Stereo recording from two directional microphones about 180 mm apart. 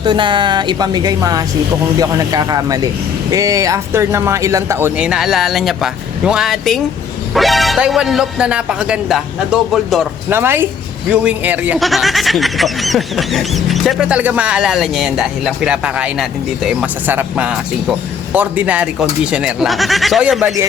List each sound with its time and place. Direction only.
0.0 s speech: 25° right (ahead or behind)
4.9 s speech: 5° right (ahead or behind)
10.2 s speech: 15° right (ahead or behind)